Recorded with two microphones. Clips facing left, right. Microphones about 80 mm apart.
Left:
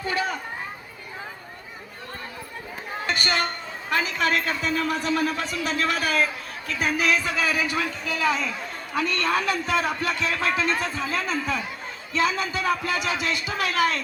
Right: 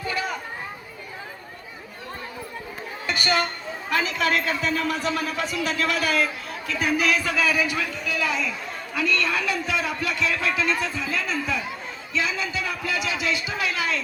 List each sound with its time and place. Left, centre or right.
3.2 s a man's voice: left